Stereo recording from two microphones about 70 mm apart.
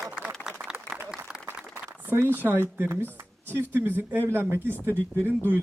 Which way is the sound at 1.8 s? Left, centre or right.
Right.